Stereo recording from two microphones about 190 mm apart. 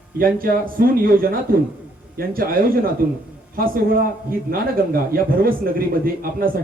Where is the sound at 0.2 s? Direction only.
50° right (ahead or behind).